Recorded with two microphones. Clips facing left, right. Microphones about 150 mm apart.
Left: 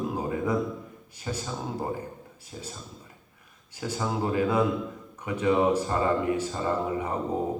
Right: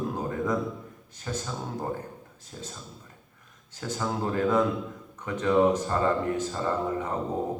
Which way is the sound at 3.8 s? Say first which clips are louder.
Left 1 dB; 10° left (ahead or behind).